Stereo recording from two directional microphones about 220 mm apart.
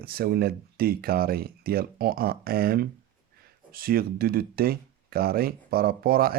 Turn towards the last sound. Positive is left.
turn(degrees=-40)  # may be behind; listen again after turning